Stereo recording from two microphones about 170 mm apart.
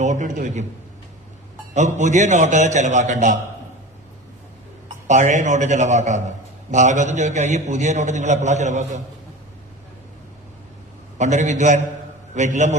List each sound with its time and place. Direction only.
0.0 s a man's voice: 45° right (ahead or behind)
1.7 s a man's voice: 45° right (ahead or behind)
5.0 s a man's voice: 45° right (ahead or behind)
11.2 s a man's voice: 45° right (ahead or behind)